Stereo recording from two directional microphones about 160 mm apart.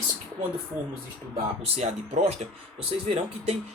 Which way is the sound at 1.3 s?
40° right (ahead or behind).